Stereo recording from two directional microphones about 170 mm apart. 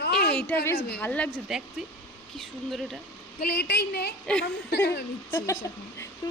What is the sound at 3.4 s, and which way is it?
A woman's voice, 80° left.